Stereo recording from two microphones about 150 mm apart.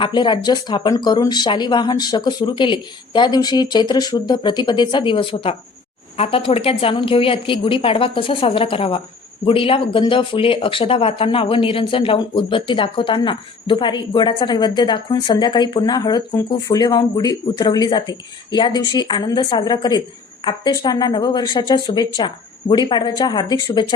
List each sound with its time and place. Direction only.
0.0 s speech: 30° left (ahead or behind)